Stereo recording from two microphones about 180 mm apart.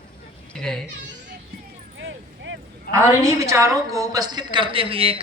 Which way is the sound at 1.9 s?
90° right.